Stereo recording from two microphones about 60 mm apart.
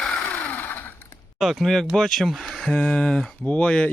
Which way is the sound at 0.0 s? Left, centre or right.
Left.